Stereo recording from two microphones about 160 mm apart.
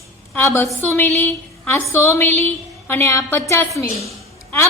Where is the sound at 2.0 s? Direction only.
15° left (ahead or behind).